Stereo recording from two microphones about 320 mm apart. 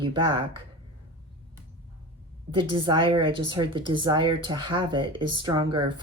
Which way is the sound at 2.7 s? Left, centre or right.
Centre.